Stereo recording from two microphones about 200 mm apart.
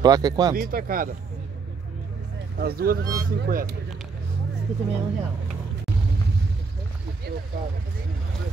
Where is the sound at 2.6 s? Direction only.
50° right (ahead or behind).